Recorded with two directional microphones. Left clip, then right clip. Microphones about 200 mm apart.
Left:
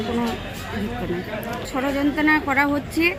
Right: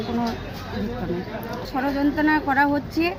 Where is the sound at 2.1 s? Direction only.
20° right (ahead or behind).